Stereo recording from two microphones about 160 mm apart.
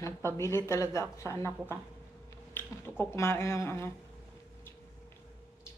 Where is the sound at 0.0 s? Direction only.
15° left (ahead or behind).